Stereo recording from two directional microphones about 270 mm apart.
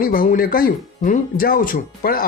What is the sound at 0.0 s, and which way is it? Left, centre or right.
Speech, left.